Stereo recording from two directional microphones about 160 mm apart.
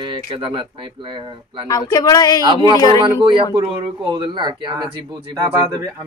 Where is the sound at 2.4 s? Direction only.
25° right (ahead or behind).